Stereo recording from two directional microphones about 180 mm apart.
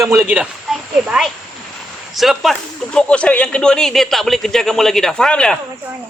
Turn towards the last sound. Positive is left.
turn(degrees=5)  # may be behind; listen again after turning